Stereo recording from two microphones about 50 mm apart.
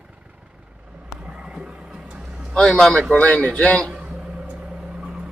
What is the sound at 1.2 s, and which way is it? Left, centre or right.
Horse, right.